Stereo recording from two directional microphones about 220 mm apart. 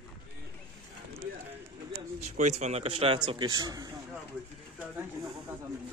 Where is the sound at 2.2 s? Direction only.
30° right (ahead or behind).